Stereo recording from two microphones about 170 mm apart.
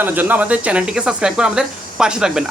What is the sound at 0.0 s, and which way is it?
Speech, 10° right (ahead or behind).